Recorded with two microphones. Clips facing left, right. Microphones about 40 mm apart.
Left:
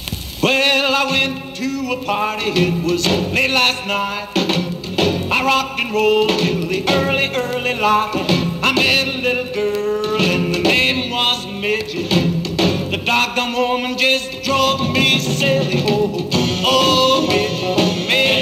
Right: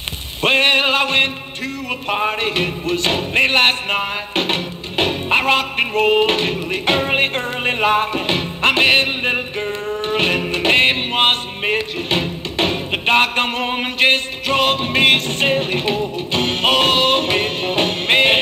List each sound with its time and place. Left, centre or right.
0.4 s music: right